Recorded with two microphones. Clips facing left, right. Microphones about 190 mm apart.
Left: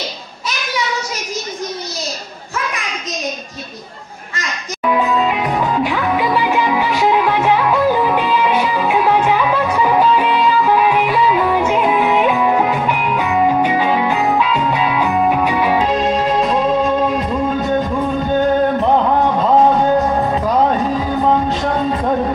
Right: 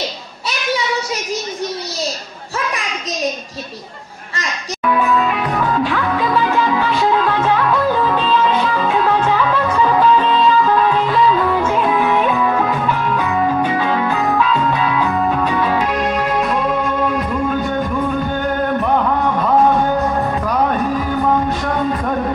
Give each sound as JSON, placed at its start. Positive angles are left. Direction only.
{"t": 4.8, "sound": "music", "side_deg": 20}
{"t": 15.9, "sound": "music", "side_deg": 25}
{"t": 18.8, "sound": "music", "side_deg": 25}